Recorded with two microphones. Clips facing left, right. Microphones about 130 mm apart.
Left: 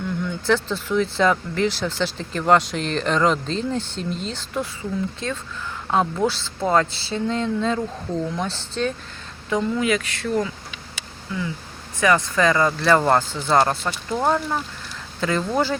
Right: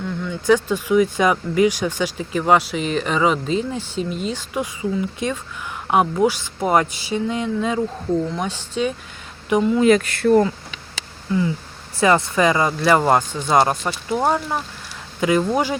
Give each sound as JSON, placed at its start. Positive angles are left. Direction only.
{"t": 0.4, "sound": "a woman's voice", "side_deg": -15}
{"t": 9.8, "sound": "speech", "side_deg": -45}
{"t": 11.9, "sound": "speech", "side_deg": -25}